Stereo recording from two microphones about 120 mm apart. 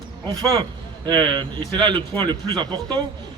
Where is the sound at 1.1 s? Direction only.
40° right (ahead or behind).